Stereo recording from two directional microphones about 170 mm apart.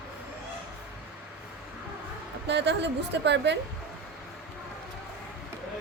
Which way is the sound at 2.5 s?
90° right.